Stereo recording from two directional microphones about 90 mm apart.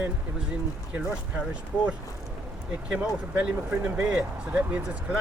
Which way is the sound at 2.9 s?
15° right (ahead or behind).